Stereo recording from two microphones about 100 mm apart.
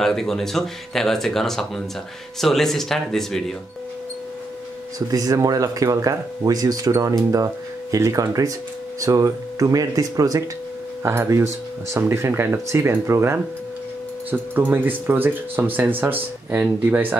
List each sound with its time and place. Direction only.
0.0 s speech: 5° left (ahead or behind)
4.9 s speech: 40° right (ahead or behind)
11.0 s speech: 25° right (ahead or behind)